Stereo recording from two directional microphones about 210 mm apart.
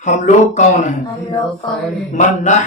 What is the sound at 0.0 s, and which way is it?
Speech, 35° left (ahead or behind).